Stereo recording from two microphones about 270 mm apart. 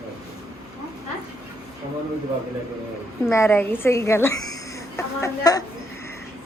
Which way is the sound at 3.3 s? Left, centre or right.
Centre.